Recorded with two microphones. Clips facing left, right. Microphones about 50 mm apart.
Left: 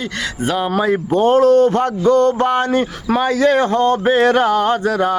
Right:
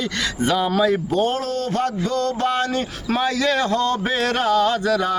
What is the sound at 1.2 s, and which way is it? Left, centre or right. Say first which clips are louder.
A man's voice: left 11 dB; left.